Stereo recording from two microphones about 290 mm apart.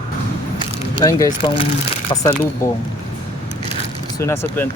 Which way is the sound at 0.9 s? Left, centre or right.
Centre.